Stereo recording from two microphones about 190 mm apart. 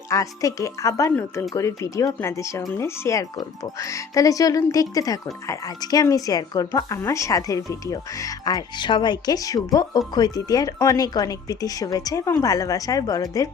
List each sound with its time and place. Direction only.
0.1 s speech: 15° left (ahead or behind)